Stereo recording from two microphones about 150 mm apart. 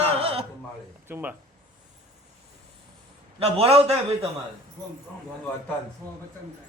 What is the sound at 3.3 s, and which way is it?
Speech, 40° right (ahead or behind).